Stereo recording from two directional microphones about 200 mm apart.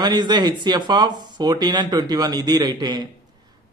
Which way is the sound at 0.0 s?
20° right (ahead or behind).